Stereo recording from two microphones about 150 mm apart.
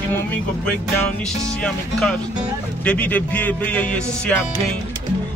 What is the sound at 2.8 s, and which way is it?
Speech, 10° left (ahead or behind).